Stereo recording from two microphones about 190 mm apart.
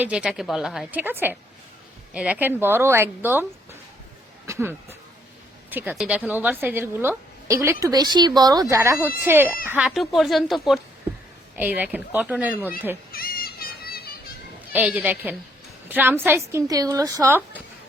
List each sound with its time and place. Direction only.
0.0 s a woman's voice: 5° right (ahead or behind)
13.1 s a sound: 50° left (ahead or behind)
14.7 s a woman's voice: 10° right (ahead or behind)